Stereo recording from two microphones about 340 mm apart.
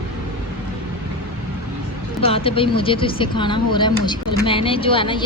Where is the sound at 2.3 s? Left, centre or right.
Centre.